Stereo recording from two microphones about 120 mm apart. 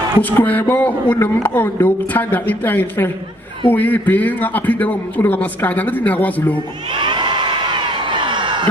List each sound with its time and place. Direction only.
0.2 s speech: 15° left (ahead or behind)
6.9 s crowd: 40° right (ahead or behind)